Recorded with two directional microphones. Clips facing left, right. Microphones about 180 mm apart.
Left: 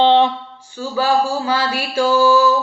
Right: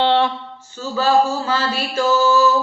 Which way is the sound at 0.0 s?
15° left (ahead or behind).